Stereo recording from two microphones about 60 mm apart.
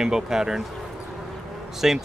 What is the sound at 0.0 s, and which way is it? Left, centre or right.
Speech, centre.